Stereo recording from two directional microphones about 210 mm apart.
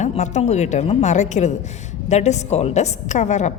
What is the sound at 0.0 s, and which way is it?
A woman's voice, 35° left (ahead or behind).